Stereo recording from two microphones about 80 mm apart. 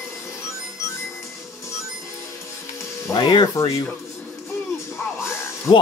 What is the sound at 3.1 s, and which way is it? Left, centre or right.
Music, left.